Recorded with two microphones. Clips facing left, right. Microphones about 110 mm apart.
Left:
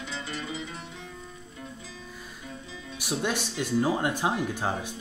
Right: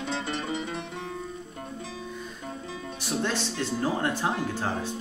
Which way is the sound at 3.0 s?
15° left (ahead or behind).